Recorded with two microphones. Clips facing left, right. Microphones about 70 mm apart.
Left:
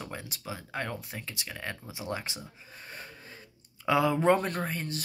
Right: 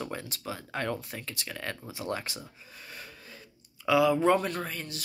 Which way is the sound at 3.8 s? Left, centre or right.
Left.